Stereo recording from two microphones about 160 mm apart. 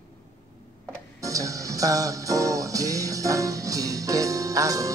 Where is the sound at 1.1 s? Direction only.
20° right (ahead or behind).